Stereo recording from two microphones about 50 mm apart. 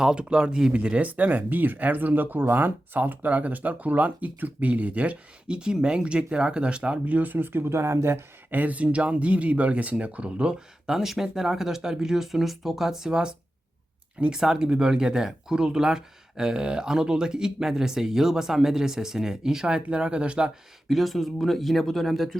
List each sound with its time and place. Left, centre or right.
0.0 s speech: centre
7.0 s speech: right
8.4 s speech: right; by 13.3 s centre
14.3 s speech: centre
20.9 s speech: centre